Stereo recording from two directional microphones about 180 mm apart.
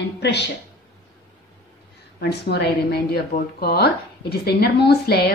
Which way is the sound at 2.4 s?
65° left (ahead or behind).